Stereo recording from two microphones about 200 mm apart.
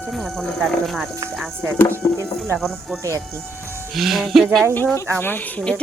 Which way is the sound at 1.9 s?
15° right (ahead or behind).